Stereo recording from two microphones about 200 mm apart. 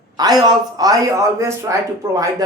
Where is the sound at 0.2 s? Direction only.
20° right (ahead or behind).